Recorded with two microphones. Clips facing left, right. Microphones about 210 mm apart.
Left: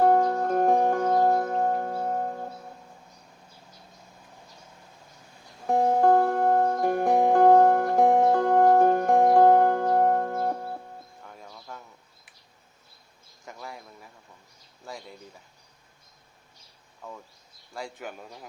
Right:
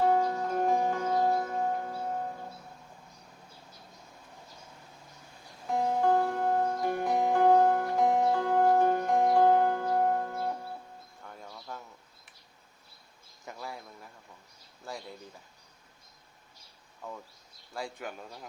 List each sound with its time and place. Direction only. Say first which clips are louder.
0.0 s music: left 5 dB; 50° left (ahead or behind)
5.6 s music: left 6 dB; 50° left (ahead or behind)
11.2 s music: left 1 dB; centre (ahead or behind)
11.4 s bird: right 1 dB; centre (ahead or behind)
13.4 s a sound: even; centre (ahead or behind)
17.7 s a sound: left 1 dB; centre (ahead or behind)